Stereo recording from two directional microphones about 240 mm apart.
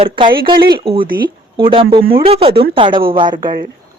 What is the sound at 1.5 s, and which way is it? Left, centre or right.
A woman's voice, right.